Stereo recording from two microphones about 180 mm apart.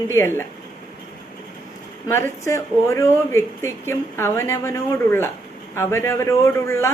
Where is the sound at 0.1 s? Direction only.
15° left (ahead or behind).